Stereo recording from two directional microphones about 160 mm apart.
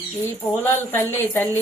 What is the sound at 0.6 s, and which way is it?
Speech, 15° left (ahead or behind).